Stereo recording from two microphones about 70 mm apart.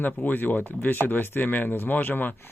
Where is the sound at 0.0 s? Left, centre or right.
Left.